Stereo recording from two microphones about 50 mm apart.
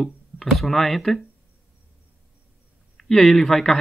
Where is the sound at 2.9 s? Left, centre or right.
Centre.